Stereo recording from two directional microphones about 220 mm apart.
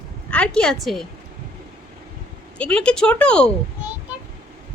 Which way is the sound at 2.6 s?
5° left (ahead or behind).